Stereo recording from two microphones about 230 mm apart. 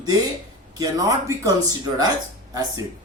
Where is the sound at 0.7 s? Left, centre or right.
Centre.